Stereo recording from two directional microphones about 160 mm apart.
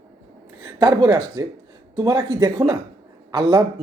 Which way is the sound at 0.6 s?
25° right (ahead or behind).